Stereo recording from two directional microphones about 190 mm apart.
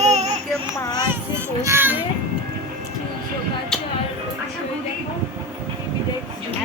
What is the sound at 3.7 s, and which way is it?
Music, 5° left (ahead or behind).